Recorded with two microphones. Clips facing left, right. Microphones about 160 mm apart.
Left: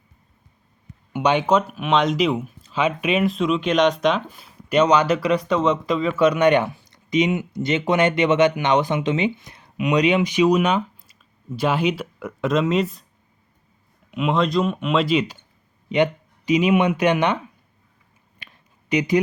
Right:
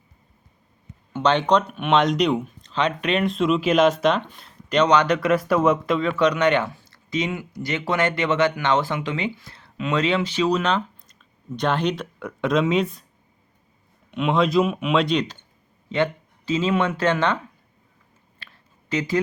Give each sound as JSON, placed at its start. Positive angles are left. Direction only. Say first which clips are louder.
{"t": 1.1, "sound": "speech", "louder": "left 1 dB", "side_deg": 10}
{"t": 14.1, "sound": "speech", "louder": "even", "side_deg": 0}
{"t": 15.9, "sound": "speech", "louder": "left 3 dB", "side_deg": 15}
{"t": 18.3, "sound": "a sound", "louder": "left 1 dB", "side_deg": 15}